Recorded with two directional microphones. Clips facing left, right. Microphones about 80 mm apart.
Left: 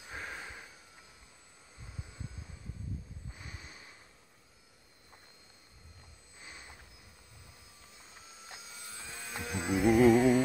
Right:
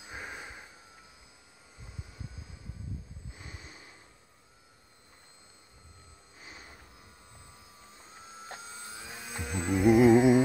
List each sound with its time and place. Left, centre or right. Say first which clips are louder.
0.0 s a sound: right 1 dB; centre
8.5 s vehicle: right 5 dB; right
8.9 s vehicle: left 1 dB; centre
9.2 s hum: right 2 dB; centre
9.8 s music: right 3 dB; centre